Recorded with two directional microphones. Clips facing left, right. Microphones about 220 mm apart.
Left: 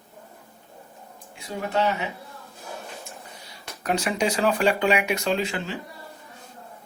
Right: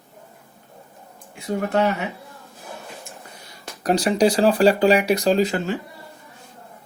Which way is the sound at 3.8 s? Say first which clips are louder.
Right 7 dB; 35° right (ahead or behind).